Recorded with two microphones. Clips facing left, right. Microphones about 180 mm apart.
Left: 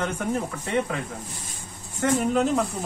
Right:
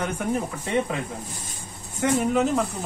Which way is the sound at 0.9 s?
20° right (ahead or behind).